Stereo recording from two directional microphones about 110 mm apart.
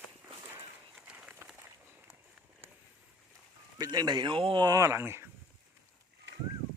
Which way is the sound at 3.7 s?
35° right (ahead or behind).